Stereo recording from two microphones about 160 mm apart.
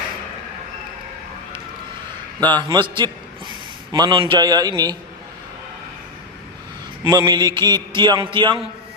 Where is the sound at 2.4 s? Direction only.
25° right (ahead or behind).